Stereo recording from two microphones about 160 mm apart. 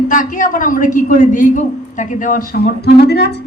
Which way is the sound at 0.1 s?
55° left (ahead or behind).